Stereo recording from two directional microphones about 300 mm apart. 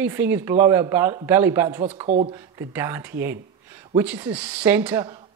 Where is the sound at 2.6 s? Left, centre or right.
Centre.